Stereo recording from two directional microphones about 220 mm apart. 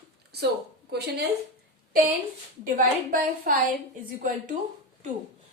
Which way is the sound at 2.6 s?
40° right (ahead or behind).